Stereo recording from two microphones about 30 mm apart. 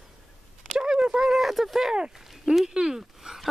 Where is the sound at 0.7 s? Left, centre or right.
Right.